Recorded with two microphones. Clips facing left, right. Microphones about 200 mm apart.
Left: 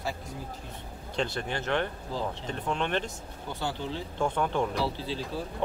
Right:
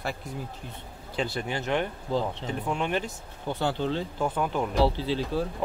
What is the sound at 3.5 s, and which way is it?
Speech, 65° right (ahead or behind).